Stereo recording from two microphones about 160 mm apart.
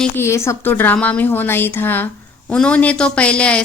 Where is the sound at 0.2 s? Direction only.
15° left (ahead or behind).